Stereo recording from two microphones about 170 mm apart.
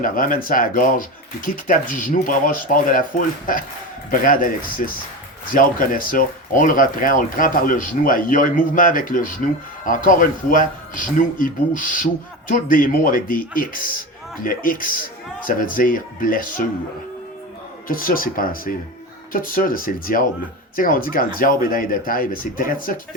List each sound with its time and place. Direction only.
0.0 s speech: 55° left (ahead or behind)
17.8 s speech: 55° left (ahead or behind)